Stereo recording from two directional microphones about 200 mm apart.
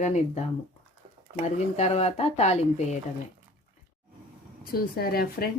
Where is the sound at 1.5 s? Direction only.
35° left (ahead or behind).